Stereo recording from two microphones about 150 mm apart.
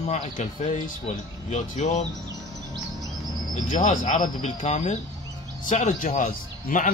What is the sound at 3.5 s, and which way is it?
A man's voice, 55° left (ahead or behind).